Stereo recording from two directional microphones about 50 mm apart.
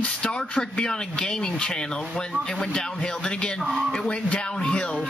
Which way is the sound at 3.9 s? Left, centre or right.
Centre.